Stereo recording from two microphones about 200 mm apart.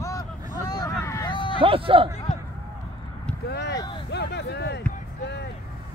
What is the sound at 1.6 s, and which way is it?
Speech, 25° right (ahead or behind).